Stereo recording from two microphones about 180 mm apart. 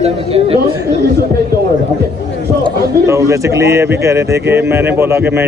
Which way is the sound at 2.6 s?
15° right (ahead or behind).